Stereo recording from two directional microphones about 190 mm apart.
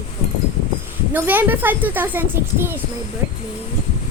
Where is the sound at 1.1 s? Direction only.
10° right (ahead or behind).